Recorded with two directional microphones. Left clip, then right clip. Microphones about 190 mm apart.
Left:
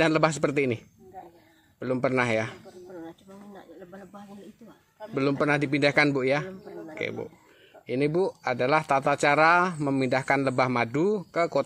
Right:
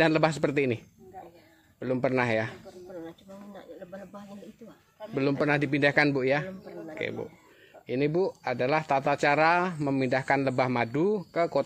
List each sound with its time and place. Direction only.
0.0 s a man's voice: 15° left (ahead or behind)
2.9 s snake: 20° right (ahead or behind)
5.1 s a man's voice: 15° left (ahead or behind)